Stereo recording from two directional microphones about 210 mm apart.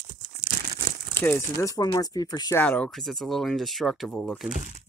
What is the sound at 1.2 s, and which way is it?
Speech, 10° left (ahead or behind).